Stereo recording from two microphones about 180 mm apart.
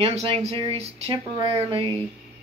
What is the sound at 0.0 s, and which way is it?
Speech, 35° right (ahead or behind).